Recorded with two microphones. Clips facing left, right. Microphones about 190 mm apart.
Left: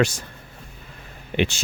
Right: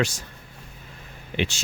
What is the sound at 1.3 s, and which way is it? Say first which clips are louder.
Speech: left 4 dB; 55° left (ahead or behind).